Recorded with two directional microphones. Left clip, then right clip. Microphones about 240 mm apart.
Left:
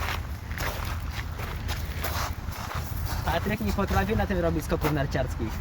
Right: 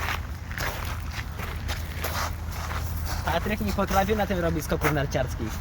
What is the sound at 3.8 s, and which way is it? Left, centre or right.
Speech, right.